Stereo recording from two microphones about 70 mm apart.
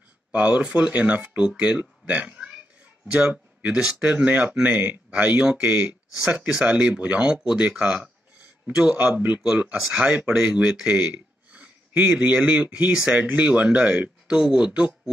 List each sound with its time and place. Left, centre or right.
0.3 s speech: centre
4.2 s speech: right
9.8 s speech: centre